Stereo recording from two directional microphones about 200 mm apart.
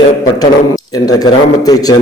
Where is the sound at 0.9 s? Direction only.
20° left (ahead or behind).